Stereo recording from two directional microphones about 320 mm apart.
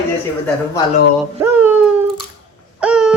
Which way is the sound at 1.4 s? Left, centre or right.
Centre.